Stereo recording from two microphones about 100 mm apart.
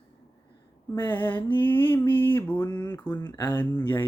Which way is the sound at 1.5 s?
15° left (ahead or behind).